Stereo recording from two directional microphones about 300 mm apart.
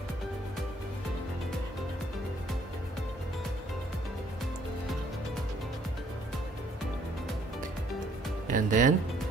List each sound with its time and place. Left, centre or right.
8.5 s speech: right